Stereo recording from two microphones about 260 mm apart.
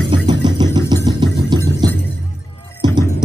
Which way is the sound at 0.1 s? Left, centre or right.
Centre.